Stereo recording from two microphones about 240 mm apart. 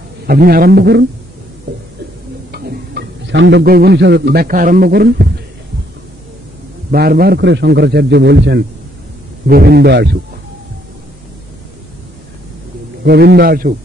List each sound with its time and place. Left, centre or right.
0.3 s a man's voice: right
2.5 s a man's voice: right
6.9 s a man's voice: right
13.0 s a man's voice: right